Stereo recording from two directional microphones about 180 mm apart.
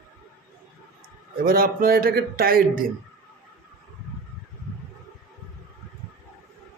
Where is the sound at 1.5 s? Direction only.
55° right (ahead or behind).